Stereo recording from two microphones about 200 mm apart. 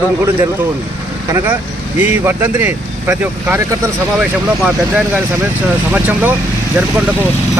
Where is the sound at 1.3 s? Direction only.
10° right (ahead or behind).